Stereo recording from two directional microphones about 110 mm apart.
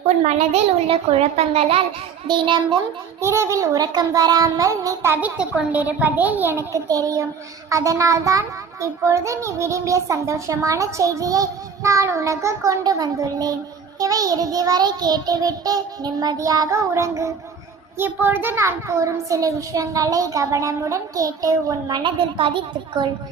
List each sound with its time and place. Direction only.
0.3 s a child's voice: 80° right
2.2 s a woman's voice: 45° right (ahead or behind)
3.2 s a child's voice: 25° right (ahead or behind)
5.4 s a child's voice: 10° right (ahead or behind); by 13.5 s 35° right (ahead or behind)
14.0 s child singing: 35° right (ahead or behind)
17.9 s a child's voice: 20° right (ahead or behind); by 22.1 s 40° right (ahead or behind)
22.4 s a woman's voice: 50° right (ahead or behind)